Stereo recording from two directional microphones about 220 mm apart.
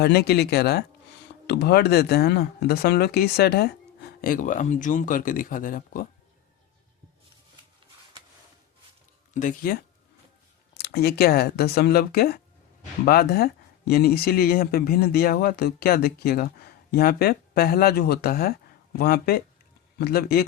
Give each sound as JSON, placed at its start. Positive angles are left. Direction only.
{"t": 0.0, "sound": "speech", "side_deg": 45}
{"t": 9.3, "sound": "speech", "side_deg": 35}
{"t": 10.8, "sound": "speech", "side_deg": 45}